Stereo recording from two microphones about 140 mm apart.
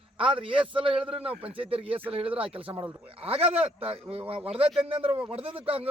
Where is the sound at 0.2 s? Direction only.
40° right (ahead or behind).